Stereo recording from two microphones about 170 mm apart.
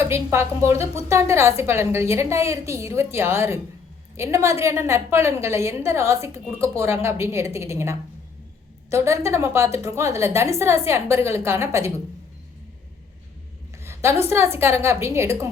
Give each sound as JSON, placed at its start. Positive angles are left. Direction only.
{"t": 0.0, "sound": "a woman's voice", "side_deg": -15}
{"t": 13.8, "sound": "a sound", "side_deg": -15}
{"t": 14.3, "sound": "a woman's voice", "side_deg": -15}